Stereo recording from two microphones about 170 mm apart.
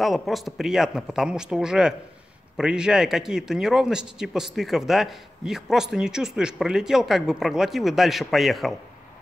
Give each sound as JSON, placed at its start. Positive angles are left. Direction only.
{"t": 0.0, "sound": "speech", "side_deg": 0}